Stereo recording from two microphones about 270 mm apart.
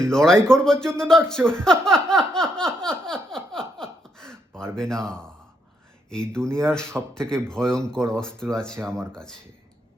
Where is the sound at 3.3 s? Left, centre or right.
Centre.